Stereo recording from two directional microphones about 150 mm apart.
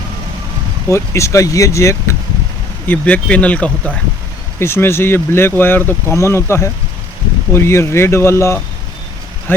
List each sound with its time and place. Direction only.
0.9 s speech: 20° left (ahead or behind)